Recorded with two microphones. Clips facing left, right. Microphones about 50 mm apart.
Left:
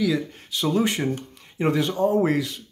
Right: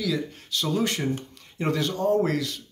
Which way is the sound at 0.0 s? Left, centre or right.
Centre.